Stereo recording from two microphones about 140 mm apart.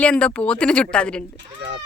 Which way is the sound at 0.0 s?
10° left (ahead or behind).